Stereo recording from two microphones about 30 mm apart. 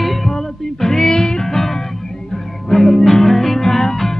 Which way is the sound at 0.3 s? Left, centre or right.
Centre.